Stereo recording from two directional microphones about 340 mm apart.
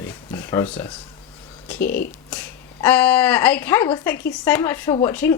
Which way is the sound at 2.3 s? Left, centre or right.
Centre.